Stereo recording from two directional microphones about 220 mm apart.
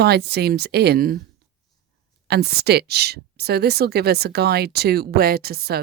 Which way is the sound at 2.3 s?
45° right (ahead or behind).